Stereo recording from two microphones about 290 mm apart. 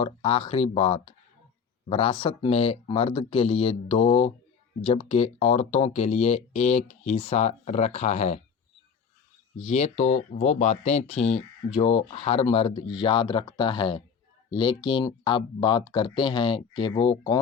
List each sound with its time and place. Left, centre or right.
0.0 s speech: centre
9.6 s speech: left